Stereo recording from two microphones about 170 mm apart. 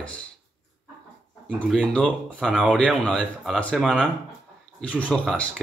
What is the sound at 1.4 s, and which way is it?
Speech, 5° left (ahead or behind).